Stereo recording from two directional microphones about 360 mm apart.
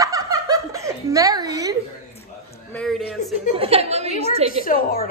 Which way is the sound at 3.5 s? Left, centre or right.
Centre.